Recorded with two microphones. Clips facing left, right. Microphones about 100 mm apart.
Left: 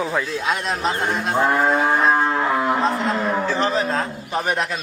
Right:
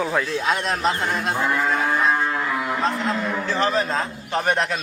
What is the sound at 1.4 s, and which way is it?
Cattle, 45° left (ahead or behind).